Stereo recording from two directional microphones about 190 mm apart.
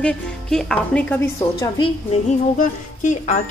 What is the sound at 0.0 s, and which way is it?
Speech, 5° left (ahead or behind).